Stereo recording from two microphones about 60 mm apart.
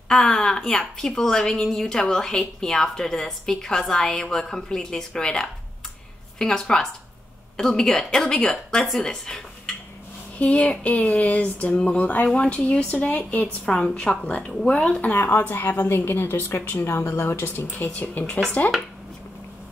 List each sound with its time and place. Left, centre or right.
0.1 s a woman's voice: centre
10.4 s speech: left
13.7 s a woman's voice: centre
14.7 s speech: centre
15.1 s speech: left
17.6 s speech: left